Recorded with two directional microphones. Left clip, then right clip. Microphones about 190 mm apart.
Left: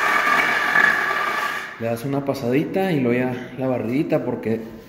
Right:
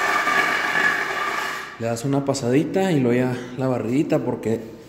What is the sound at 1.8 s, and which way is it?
Speech, 20° right (ahead or behind).